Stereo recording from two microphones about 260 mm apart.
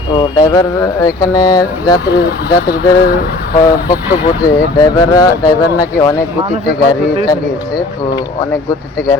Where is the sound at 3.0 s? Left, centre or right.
Left.